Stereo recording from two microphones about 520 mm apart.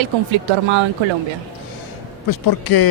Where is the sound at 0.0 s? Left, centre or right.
Right.